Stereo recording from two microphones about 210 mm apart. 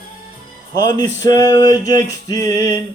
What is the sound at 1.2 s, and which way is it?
Music, 15° left (ahead or behind).